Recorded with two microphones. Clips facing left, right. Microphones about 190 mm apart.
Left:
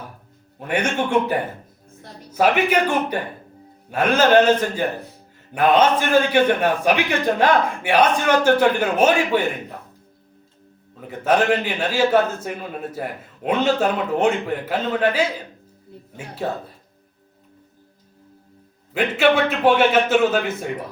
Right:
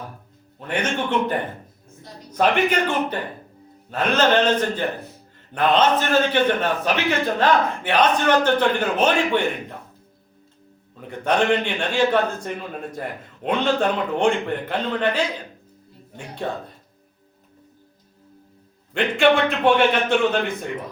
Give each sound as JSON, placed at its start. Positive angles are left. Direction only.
{"t": 0.6, "sound": "a man's voice", "side_deg": 10}
{"t": 10.9, "sound": "a man's voice", "side_deg": 5}
{"t": 18.9, "sound": "a man's voice", "side_deg": 5}